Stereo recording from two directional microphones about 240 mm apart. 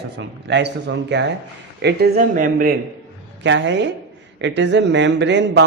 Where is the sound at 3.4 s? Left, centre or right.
Right.